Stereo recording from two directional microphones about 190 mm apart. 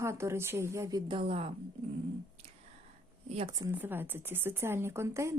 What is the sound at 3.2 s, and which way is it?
Speech, 30° right (ahead or behind).